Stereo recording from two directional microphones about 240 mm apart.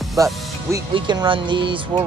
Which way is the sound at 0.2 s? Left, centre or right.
Centre.